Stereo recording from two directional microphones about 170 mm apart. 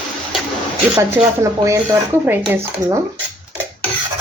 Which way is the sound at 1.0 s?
20° right (ahead or behind).